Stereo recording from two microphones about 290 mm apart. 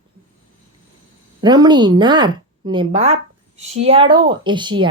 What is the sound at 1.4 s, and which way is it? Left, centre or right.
A woman's voice, centre.